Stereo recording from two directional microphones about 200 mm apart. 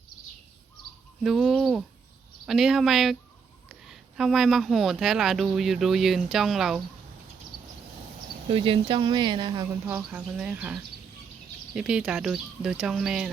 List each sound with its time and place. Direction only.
1.2 s speech: centre (ahead or behind)
8.4 s speech: 25° right (ahead or behind)
10.0 s speech: 5° right (ahead or behind)